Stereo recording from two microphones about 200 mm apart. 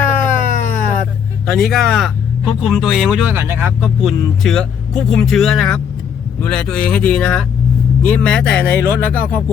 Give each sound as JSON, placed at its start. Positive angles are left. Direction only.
{"t": 0.3, "sound": "a sound", "side_deg": 40}
{"t": 1.5, "sound": "speech", "side_deg": 0}
{"t": 3.8, "sound": "speech", "side_deg": 0}